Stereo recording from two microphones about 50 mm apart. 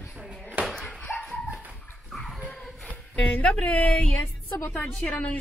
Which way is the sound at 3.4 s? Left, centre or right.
Left.